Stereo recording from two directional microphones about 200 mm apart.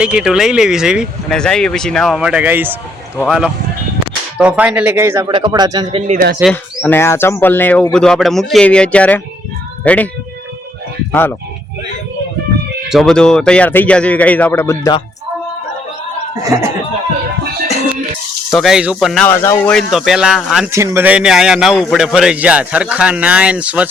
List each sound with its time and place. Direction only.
0.0 s a man's voice: 5° right (ahead or behind); by 6.0 s 20° right (ahead or behind)
6.1 s speech: 45° right (ahead or behind)
6.4 s a man's voice: 10° left (ahead or behind)
11.1 s speech: 10° left (ahead or behind)
12.9 s speech: centre (ahead or behind)
18.5 s a man's voice: centre (ahead or behind)
19.3 s a man's voice: 10° left (ahead or behind)
20.7 s a man's voice: 15° right (ahead or behind)